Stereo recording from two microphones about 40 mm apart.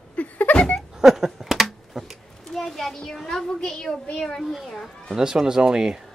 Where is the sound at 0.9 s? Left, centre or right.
Centre.